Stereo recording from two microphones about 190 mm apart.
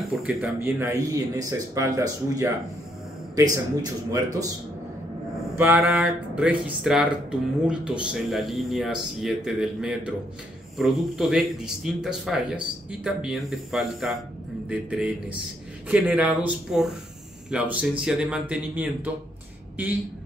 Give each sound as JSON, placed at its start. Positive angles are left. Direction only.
{"t": 0.0, "sound": "speech", "side_deg": 0}
{"t": 3.8, "sound": "a man's voice", "side_deg": -20}
{"t": 5.8, "sound": "speech", "side_deg": 0}